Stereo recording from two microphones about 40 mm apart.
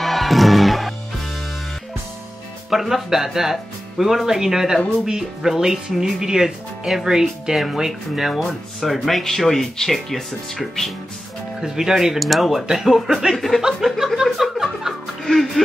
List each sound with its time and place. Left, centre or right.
0.0 s music: centre
2.7 s speech: centre
8.3 s speech: centre
11.6 s speech: centre
13.9 s music: centre
15.2 s speech: centre